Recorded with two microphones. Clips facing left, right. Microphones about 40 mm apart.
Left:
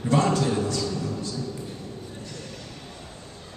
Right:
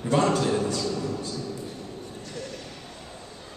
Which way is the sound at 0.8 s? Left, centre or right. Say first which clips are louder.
Even; centre.